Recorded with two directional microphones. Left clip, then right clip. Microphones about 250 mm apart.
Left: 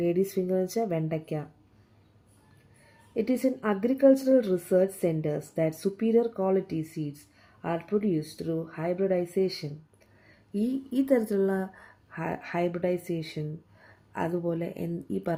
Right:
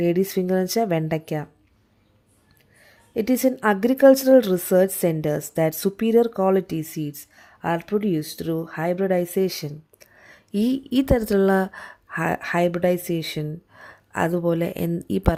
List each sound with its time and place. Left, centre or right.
0.0 s speech: right
3.2 s speech: right